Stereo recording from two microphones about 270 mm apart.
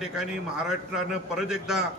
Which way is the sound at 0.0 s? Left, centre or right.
Centre.